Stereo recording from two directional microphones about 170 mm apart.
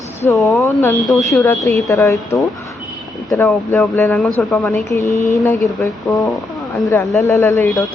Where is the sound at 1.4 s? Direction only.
20° left (ahead or behind).